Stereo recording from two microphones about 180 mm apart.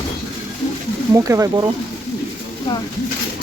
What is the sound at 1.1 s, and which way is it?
Speech, 15° right (ahead or behind).